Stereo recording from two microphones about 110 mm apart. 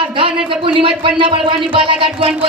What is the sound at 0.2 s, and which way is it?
Speech, 50° right (ahead or behind).